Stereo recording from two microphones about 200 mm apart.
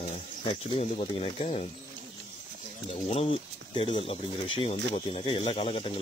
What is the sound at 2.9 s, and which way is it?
Speech, 30° left (ahead or behind).